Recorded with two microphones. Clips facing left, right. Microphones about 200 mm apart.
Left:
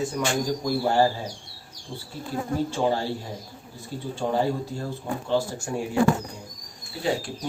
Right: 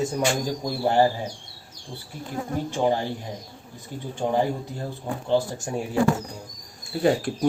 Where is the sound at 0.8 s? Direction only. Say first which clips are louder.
Right 3 dB; 20° right (ahead or behind).